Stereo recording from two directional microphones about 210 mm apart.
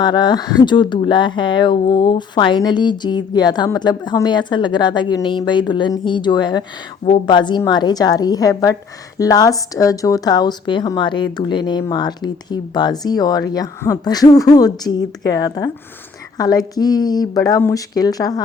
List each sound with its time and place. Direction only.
0.0 s speech: 20° left (ahead or behind)